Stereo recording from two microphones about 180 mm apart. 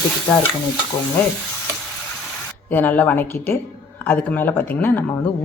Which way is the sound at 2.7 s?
10° left (ahead or behind).